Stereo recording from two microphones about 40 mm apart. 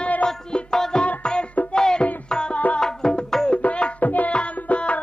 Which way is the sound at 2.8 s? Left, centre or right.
Centre.